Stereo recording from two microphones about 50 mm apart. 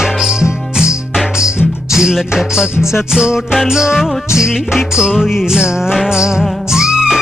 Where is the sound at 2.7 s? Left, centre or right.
Left.